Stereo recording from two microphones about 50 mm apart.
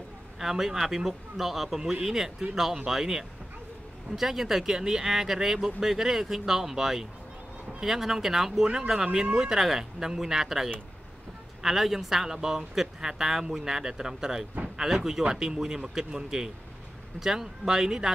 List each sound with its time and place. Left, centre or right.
0.4 s speech: centre